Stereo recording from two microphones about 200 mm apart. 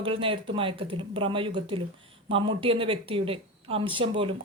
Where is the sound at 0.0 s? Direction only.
25° right (ahead or behind).